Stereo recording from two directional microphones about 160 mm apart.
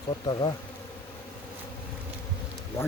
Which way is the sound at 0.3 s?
30° left (ahead or behind).